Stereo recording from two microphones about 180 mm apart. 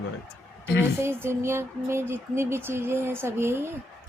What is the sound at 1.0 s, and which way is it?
Speech, 15° right (ahead or behind).